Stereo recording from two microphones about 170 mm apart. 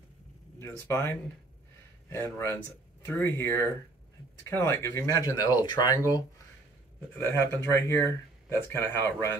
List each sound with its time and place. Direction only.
0.6 s speech: 15° left (ahead or behind)